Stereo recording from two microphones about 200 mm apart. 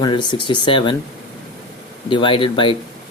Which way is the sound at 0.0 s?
20° left (ahead or behind).